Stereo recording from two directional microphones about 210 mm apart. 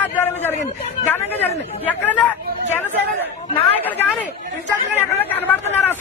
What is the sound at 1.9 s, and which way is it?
Speech, 5° left (ahead or behind).